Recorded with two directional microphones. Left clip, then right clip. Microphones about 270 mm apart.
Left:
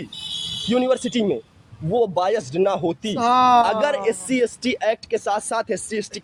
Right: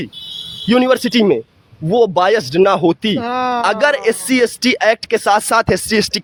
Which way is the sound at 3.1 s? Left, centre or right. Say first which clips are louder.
Left 3 dB; centre.